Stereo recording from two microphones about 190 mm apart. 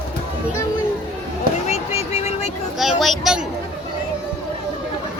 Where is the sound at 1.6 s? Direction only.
35° left (ahead or behind).